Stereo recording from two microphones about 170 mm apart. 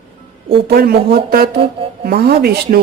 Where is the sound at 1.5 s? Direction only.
35° right (ahead or behind).